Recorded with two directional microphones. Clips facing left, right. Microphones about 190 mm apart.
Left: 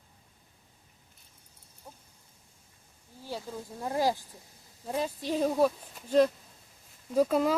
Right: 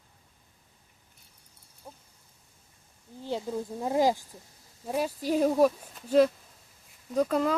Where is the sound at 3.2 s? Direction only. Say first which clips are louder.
Right 6 dB; 20° right (ahead or behind).